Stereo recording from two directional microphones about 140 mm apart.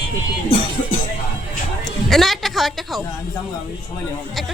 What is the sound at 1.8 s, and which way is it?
Speech, centre (ahead or behind).